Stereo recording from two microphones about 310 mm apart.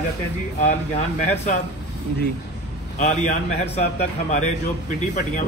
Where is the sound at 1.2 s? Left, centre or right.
Left.